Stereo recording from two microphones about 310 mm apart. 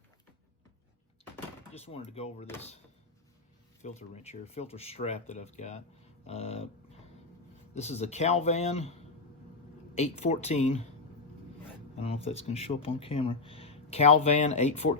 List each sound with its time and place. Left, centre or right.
1.7 s speech: centre
3.8 s speech: left
6.2 s dog: centre
7.8 s speech: left
11.9 s speech: centre